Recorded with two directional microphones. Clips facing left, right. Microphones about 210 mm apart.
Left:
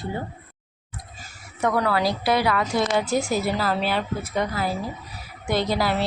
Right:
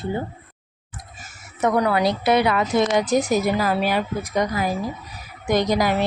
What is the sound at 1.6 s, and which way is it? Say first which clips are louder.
A woman's voice: right 3 dB; 20° right (ahead or behind).